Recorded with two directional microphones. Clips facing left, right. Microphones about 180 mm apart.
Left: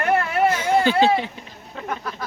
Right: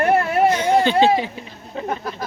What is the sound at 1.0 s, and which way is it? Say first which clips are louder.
Speech: right 2 dB; centre (ahead or behind).